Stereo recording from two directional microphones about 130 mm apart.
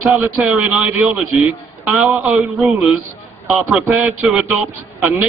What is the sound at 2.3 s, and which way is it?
A man's voice, centre (ahead or behind).